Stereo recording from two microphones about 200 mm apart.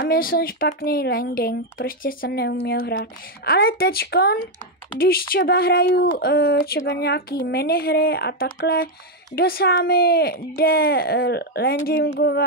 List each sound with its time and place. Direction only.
0.0 s speech: 50° left (ahead or behind)